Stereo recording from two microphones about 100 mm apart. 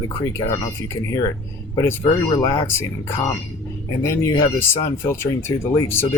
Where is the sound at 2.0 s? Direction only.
40° left (ahead or behind).